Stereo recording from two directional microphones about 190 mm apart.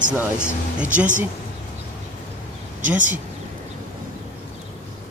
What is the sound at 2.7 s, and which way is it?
Speech, 40° right (ahead or behind).